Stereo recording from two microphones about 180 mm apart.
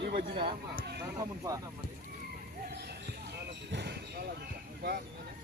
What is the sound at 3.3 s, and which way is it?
Speech, 70° right (ahead or behind).